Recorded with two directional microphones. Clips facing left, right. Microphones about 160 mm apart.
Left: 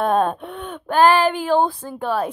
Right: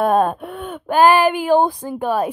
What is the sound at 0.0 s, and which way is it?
A woman's voice, 5° right (ahead or behind).